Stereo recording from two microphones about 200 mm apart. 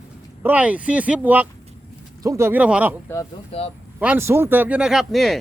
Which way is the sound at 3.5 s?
30° left (ahead or behind).